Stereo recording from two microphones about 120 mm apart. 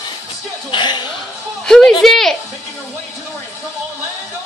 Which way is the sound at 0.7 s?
40° left (ahead or behind).